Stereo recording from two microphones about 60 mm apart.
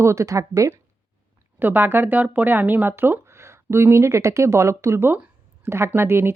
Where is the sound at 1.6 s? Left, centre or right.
Right.